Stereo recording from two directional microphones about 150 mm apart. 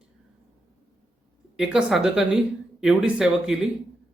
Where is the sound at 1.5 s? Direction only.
5° right (ahead or behind).